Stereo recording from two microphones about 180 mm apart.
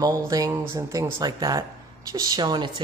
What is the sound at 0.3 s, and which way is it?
Speech, 15° right (ahead or behind).